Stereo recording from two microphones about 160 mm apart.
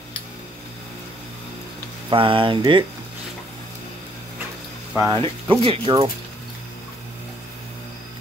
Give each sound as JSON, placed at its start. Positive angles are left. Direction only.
{"t": 2.0, "sound": "speech", "side_deg": -35}
{"t": 4.9, "sound": "speech", "side_deg": -20}
{"t": 5.5, "sound": "speech", "side_deg": -35}